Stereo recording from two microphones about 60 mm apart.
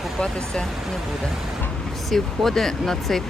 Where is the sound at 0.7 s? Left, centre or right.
Centre.